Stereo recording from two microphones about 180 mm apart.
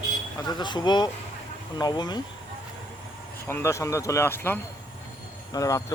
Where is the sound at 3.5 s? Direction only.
15° left (ahead or behind).